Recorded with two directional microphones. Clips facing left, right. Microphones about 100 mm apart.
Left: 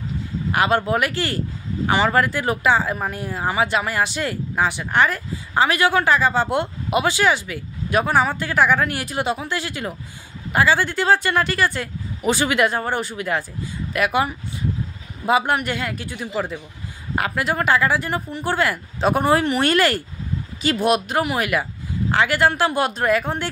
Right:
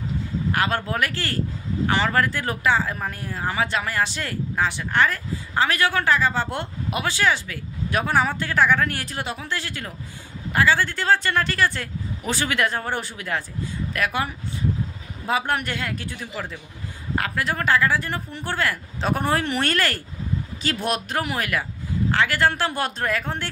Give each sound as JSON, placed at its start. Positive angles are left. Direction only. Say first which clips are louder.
{"t": 0.5, "sound": "speech", "louder": "left 6 dB", "side_deg": 15}
{"t": 12.8, "sound": "speech", "louder": "left 4 dB", "side_deg": 5}